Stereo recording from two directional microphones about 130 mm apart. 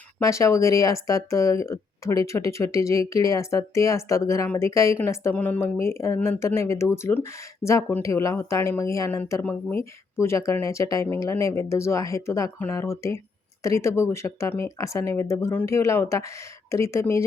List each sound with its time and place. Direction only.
0.2 s speech: 25° left (ahead or behind)